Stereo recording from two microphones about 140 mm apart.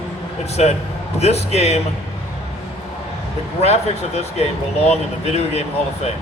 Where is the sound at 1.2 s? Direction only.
50° left (ahead or behind).